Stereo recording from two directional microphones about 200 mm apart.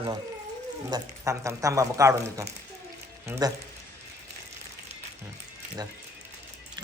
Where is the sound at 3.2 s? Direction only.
15° right (ahead or behind).